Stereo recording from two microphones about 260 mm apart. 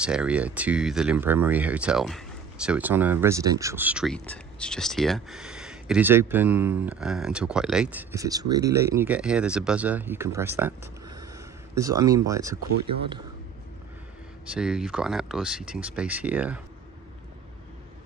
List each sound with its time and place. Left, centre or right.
0.0 s speech: centre
14.5 s speech: centre